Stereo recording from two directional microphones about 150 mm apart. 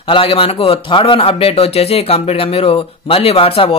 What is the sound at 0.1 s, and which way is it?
A man's voice, 35° left (ahead or behind).